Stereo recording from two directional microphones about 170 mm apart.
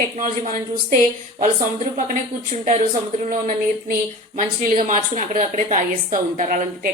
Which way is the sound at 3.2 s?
55° right (ahead or behind).